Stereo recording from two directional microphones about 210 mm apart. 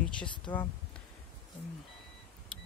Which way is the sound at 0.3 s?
20° left (ahead or behind).